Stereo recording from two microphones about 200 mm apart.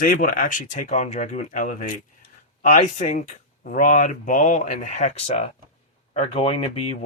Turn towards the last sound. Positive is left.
turn(degrees=30)  # may be behind; listen again after turning